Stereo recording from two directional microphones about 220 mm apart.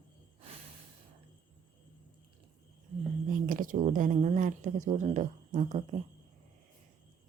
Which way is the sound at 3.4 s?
40° right (ahead or behind).